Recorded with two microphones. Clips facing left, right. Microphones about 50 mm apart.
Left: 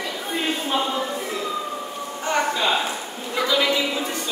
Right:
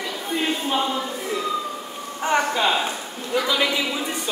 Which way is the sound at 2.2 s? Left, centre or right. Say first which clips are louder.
Right 2 dB; right.